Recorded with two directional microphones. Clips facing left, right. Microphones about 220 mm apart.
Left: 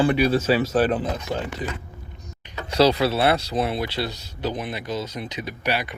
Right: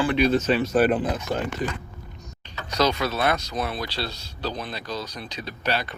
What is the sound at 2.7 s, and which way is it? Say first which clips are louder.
Speech: left 5 dB; 30° left (ahead or behind).